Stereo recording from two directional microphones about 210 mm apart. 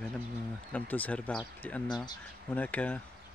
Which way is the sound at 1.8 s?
20° left (ahead or behind).